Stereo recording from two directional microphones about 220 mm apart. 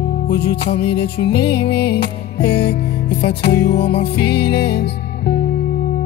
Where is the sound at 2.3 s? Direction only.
25° left (ahead or behind).